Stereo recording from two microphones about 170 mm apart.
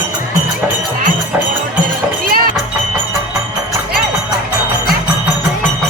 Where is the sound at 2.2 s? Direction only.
60° right (ahead or behind).